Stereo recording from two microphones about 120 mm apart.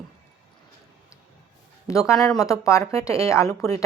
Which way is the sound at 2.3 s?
25° left (ahead or behind).